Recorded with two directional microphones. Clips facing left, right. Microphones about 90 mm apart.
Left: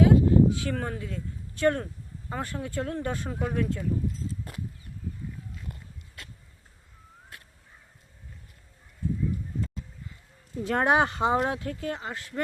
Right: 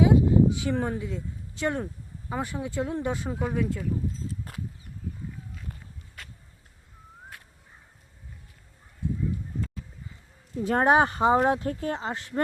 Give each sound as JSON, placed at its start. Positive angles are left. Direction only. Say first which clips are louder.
{"t": 0.0, "sound": "a sound", "louder": "even", "side_deg": -15}
{"t": 2.3, "sound": "speech", "louder": "right 2 dB", "side_deg": -15}
{"t": 10.7, "sound": "speech", "louder": "right 2 dB", "side_deg": -35}
{"t": 11.2, "sound": "speech", "louder": "right 4 dB", "side_deg": -25}